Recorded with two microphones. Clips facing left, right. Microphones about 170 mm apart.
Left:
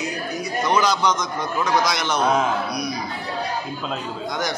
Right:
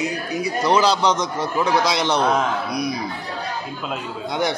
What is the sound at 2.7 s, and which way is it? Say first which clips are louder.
Chatter: right 3 dB; 25° right (ahead or behind).